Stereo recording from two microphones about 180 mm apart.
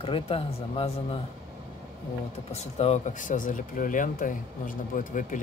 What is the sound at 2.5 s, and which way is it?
Speech, 35° left (ahead or behind).